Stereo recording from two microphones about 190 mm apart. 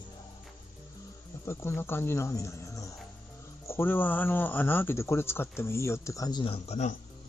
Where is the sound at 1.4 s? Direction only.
15° left (ahead or behind); by 7.0 s 35° left (ahead or behind).